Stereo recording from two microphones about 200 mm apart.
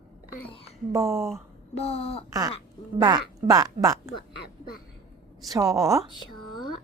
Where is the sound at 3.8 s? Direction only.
15° right (ahead or behind).